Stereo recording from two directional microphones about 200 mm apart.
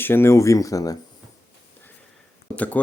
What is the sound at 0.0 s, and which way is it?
Speech, 10° left (ahead or behind).